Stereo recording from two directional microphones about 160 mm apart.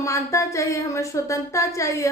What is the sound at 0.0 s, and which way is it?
A woman's voice, 20° left (ahead or behind).